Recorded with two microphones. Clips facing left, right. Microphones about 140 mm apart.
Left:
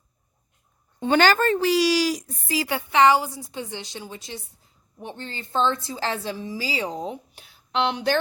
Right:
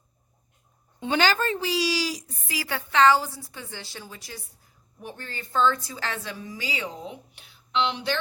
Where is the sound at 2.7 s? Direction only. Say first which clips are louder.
Left 2 dB; 15° left (ahead or behind).